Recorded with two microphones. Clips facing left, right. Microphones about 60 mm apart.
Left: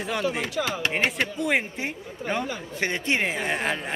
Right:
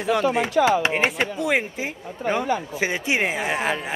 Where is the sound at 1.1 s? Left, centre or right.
Centre.